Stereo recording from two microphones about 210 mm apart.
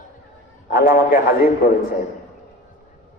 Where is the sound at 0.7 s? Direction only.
45° left (ahead or behind).